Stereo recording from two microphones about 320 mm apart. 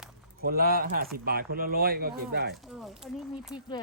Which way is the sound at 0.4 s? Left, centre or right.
Right.